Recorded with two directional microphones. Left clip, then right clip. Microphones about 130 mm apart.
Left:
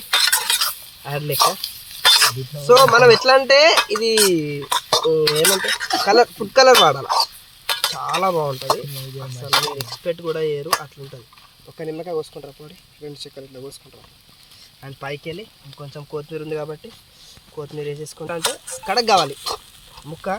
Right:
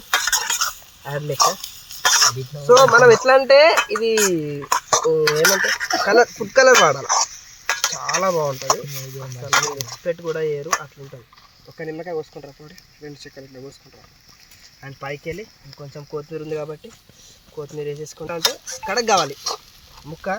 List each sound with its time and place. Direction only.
0.1 s stir: centre (ahead or behind)
2.0 s speech: 5° left (ahead or behind)
4.7 s cutlery: 10° left (ahead or behind)
7.7 s a sound: 5° left (ahead or behind)
8.5 s speech: 10° left (ahead or behind)
15.0 s speech: 15° right (ahead or behind)
16.6 s speech: centre (ahead or behind)
20.0 s a sound: centre (ahead or behind)